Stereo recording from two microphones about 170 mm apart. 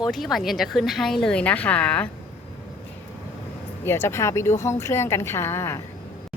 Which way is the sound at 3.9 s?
15° left (ahead or behind).